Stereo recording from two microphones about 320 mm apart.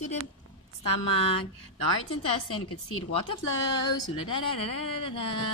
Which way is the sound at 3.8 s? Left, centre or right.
Centre.